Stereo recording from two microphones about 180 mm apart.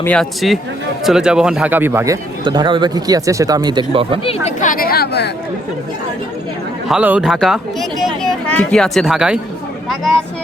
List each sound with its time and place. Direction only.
0.0 s speech: 5° left (ahead or behind); by 2.1 s 15° right (ahead or behind)
2.4 s speech: 25° right (ahead or behind)
4.2 s speech: 30° left (ahead or behind)
4.6 s a sound: 50° left (ahead or behind)
6.8 s speech: 5° right (ahead or behind)